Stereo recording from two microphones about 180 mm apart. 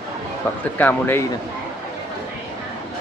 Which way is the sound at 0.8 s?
10° left (ahead or behind).